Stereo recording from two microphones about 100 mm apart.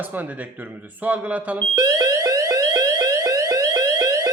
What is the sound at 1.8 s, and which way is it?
Alarm, 35° right (ahead or behind).